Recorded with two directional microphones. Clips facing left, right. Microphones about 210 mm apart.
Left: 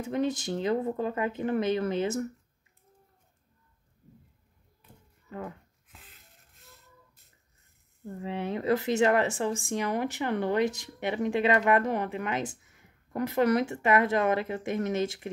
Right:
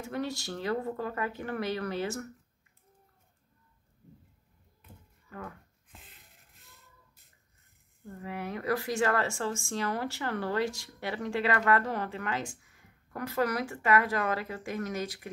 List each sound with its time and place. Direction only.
0.0 s speech: 20° left (ahead or behind)
5.3 s speech: 25° left (ahead or behind)
5.9 s a sound: centre (ahead or behind)
8.2 s speech: 25° left (ahead or behind)